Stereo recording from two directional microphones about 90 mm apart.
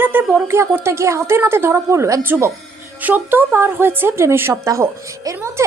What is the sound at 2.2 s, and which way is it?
A woman's voice, 25° right (ahead or behind).